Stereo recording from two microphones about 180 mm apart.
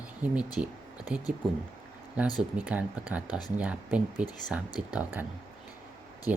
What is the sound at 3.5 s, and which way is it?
Speech, 5° right (ahead or behind).